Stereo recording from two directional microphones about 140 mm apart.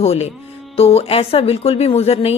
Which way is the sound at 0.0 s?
50° left (ahead or behind).